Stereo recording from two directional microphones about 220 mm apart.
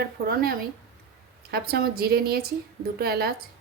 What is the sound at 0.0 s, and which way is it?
A woman's voice, 45° right (ahead or behind).